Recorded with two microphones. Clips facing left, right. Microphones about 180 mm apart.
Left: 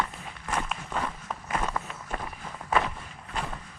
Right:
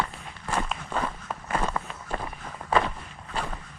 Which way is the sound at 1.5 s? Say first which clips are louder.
Right 2 dB; 30° right (ahead or behind).